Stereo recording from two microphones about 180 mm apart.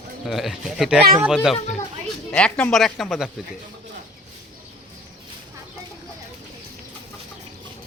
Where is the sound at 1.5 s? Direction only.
40° left (ahead or behind).